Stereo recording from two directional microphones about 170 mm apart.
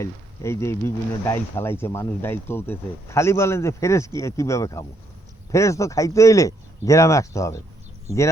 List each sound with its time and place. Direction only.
0.0 s speech: 15° left (ahead or behind)